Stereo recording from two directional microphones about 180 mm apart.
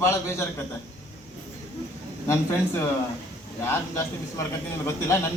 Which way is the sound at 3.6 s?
15° left (ahead or behind).